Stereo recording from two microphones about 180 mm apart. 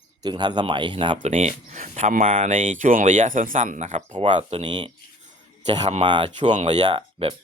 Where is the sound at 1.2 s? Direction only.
40° right (ahead or behind).